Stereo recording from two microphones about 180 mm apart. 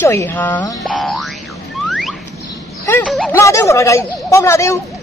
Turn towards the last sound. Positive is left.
turn(degrees=15)  # may be behind; listen again after turning